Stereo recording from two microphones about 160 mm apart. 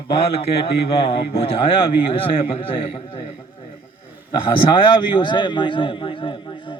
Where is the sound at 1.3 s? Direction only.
35° left (ahead or behind).